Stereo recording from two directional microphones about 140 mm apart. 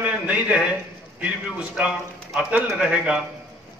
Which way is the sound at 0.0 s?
10° right (ahead or behind).